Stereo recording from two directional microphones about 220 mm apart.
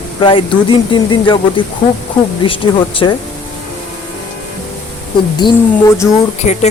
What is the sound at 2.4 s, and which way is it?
Speech, 25° left (ahead or behind).